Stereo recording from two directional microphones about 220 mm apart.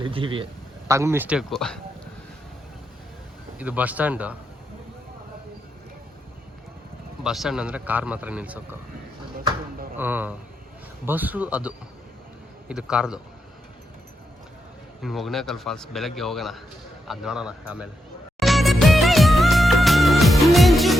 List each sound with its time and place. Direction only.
0.0 s a man's voice: 25° right (ahead or behind)
0.9 s a man's voice: 15° right (ahead or behind)
3.6 s speech: 5° right (ahead or behind)
7.3 s a man's voice: centre (ahead or behind)
10.0 s a man's voice: 10° right (ahead or behind)
15.0 s a man's voice: centre (ahead or behind)
18.3 s music of bollywood: centre (ahead or behind)